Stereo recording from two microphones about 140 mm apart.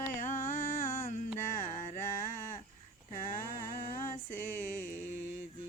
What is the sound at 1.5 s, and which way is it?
Carnatic music, 65° left (ahead or behind).